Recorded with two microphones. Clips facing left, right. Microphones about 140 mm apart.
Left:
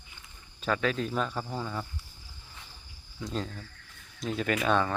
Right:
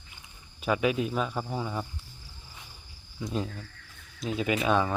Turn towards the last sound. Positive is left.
turn(degrees=-5)  # may be behind; listen again after turning